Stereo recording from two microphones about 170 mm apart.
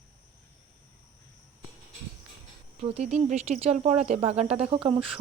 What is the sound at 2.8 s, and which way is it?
Speech, 40° right (ahead or behind).